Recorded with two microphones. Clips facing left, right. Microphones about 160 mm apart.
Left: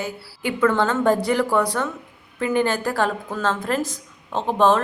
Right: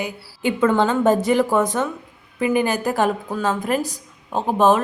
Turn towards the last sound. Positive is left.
turn(degrees=-15)  # may be behind; listen again after turning